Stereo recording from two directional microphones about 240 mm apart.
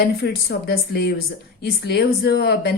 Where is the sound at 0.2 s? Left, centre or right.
Left.